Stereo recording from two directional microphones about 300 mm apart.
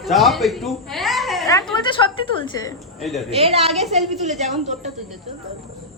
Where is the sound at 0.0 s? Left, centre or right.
Centre.